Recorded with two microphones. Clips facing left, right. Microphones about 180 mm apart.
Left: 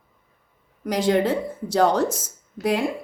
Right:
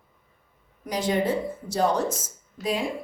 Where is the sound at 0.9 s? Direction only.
75° left (ahead or behind).